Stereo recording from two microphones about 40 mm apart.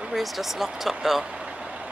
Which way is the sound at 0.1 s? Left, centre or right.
Centre.